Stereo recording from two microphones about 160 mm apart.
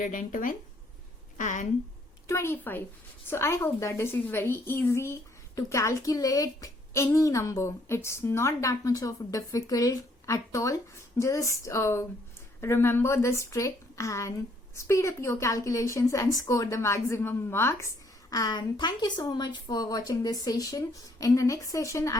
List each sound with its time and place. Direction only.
0.0 s speech: 55° left (ahead or behind)
1.4 s a sound: 50° left (ahead or behind)
2.2 s a woman's voice: 15° left (ahead or behind)